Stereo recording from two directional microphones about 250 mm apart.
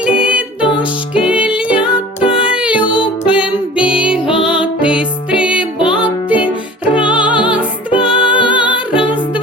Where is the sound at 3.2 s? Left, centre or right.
Centre.